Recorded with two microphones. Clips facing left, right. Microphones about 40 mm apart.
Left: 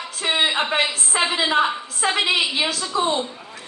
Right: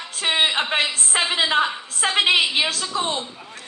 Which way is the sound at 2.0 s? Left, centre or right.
Right.